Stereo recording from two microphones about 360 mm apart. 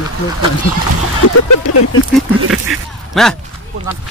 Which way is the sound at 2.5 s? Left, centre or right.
Right.